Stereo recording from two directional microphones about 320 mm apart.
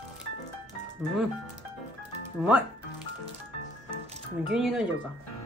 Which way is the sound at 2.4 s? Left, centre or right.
Centre.